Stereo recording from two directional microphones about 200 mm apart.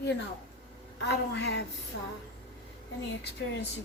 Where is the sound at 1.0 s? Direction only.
60° left (ahead or behind).